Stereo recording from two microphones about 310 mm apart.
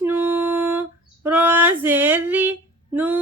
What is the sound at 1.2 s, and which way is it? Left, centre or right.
Female singing, centre.